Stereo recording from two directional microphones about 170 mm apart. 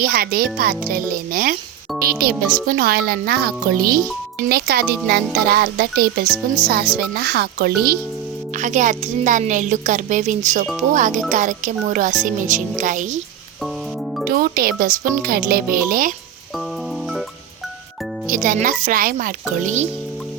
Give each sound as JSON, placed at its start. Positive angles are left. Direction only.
{"t": 0.0, "sound": "a child's voice", "side_deg": -60}
{"t": 8.5, "sound": "speech", "side_deg": -50}
{"t": 14.3, "sound": "speech", "side_deg": -60}
{"t": 18.3, "sound": "speech", "side_deg": -55}